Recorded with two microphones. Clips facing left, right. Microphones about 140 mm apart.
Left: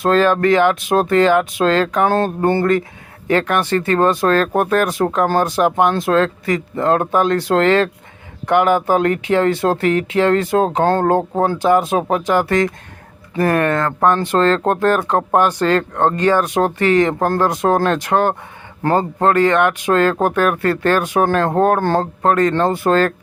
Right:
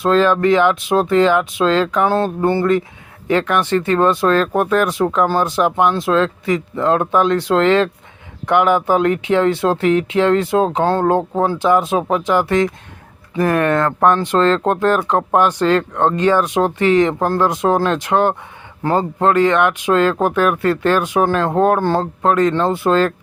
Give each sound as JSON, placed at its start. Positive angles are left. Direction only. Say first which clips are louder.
{"t": 0.0, "sound": "speech", "louder": "even", "side_deg": 50}